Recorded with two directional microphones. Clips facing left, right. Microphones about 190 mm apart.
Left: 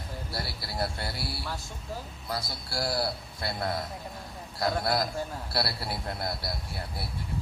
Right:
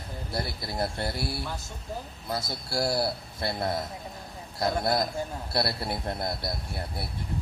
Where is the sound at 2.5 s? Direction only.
25° right (ahead or behind).